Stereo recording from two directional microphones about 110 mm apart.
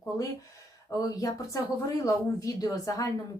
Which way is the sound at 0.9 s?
30° left (ahead or behind).